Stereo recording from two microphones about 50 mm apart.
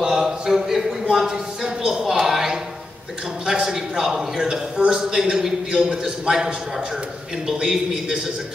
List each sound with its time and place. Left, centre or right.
0.0 s a sound: centre
3.4 s a man's voice: centre
7.4 s a man's voice: centre